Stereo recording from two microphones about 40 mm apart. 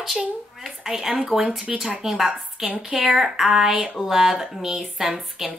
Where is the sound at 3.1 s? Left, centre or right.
Centre.